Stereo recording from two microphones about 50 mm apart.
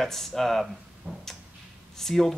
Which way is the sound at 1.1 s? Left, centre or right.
Right.